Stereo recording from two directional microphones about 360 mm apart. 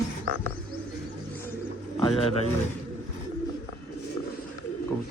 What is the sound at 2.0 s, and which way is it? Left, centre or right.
Speech, centre.